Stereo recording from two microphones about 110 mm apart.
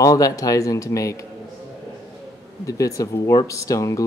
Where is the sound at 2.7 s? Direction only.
30° left (ahead or behind).